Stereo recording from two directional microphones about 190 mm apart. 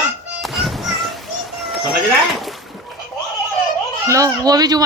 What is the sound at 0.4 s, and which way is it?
Children playing, centre (ahead or behind).